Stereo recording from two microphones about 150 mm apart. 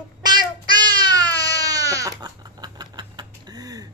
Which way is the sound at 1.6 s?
25° right (ahead or behind).